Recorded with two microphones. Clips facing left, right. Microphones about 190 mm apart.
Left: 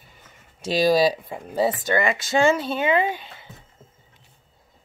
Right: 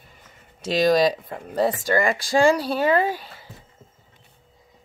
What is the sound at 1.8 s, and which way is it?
Speech, 20° left (ahead or behind).